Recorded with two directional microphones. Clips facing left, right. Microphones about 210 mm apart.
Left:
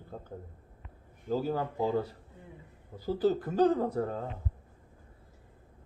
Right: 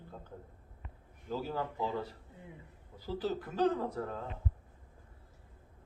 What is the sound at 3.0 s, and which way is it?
Speech, 40° left (ahead or behind).